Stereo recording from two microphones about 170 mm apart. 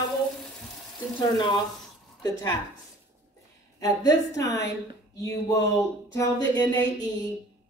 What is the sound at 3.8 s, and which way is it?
A woman's voice, 20° left (ahead or behind).